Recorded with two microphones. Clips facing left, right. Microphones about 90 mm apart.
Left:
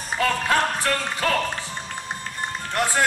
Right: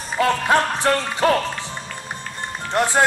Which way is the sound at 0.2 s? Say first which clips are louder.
Right 4 dB; 25° right (ahead or behind).